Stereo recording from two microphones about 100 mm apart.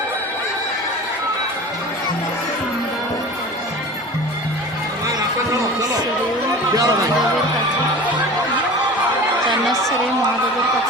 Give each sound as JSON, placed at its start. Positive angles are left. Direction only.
{"t": 6.7, "sound": "speech", "side_deg": -35}